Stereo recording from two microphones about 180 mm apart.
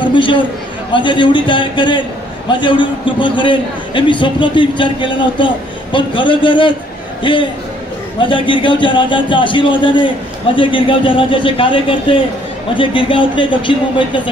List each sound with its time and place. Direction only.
0.0 s a man's voice: 25° left (ahead or behind)